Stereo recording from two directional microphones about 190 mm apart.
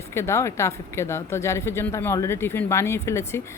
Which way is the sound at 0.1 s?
15° left (ahead or behind).